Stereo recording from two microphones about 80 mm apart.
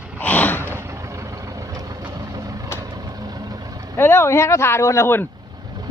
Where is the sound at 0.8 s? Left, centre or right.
Right.